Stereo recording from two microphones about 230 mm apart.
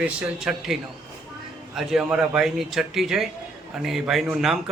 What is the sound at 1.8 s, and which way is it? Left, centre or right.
A man's voice, centre.